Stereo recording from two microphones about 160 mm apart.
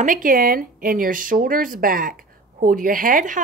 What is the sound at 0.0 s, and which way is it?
A woman's voice, 55° right (ahead or behind).